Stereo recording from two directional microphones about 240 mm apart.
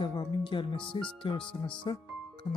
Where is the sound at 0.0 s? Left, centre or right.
Centre.